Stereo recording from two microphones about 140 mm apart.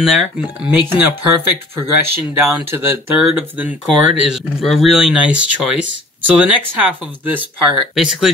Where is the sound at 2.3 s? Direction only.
15° right (ahead or behind).